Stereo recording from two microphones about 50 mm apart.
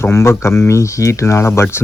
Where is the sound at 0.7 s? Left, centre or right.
Left.